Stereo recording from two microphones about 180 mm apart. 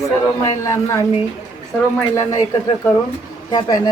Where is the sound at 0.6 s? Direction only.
15° left (ahead or behind).